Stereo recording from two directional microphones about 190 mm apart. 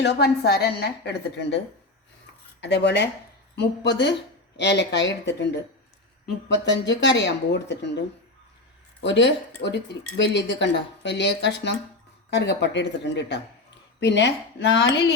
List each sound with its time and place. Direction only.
0.0 s a woman's voice: 60° left (ahead or behind)
2.6 s a woman's voice: 70° left (ahead or behind)
9.6 s speech: 50° left (ahead or behind)
10.2 s a woman's voice: 65° left (ahead or behind)